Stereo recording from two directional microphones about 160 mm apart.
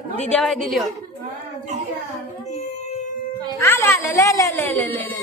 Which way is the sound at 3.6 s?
15° left (ahead or behind).